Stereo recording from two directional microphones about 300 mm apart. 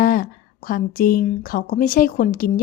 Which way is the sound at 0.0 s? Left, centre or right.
Left.